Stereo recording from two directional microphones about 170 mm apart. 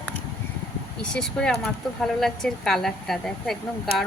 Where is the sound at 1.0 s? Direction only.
5° left (ahead or behind).